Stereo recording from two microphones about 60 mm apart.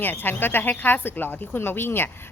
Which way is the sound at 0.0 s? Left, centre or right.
Left.